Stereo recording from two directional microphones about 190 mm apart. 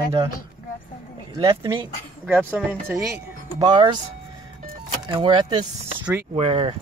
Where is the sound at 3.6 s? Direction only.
25° right (ahead or behind).